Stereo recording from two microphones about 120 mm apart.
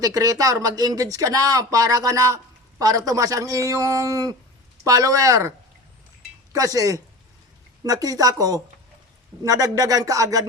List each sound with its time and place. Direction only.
0.0 s speech: 30° right (ahead or behind)
6.5 s speech: 30° right (ahead or behind)